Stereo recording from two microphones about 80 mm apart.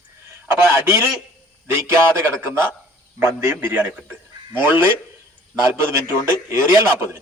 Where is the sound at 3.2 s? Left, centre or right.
Right.